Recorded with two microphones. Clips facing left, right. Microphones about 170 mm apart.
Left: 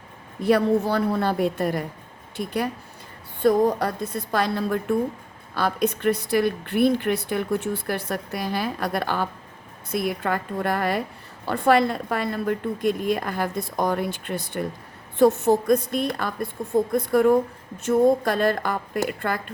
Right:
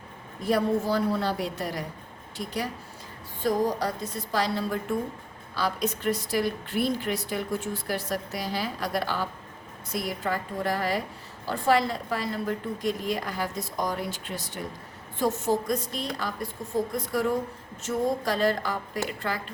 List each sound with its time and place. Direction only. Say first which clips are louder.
0.4 s speech: left 5 dB; 65° left (ahead or behind)